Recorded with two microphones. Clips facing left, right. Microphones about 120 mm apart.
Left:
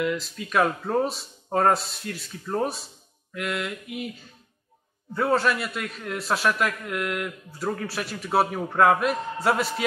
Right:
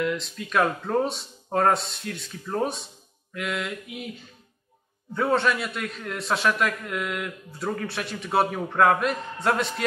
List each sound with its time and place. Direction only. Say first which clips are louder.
0.0 s a man's voice: even; centre (ahead or behind)
5.1 s a man's voice: even; centre (ahead or behind)